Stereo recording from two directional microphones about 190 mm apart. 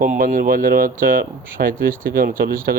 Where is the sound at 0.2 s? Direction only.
45° right (ahead or behind).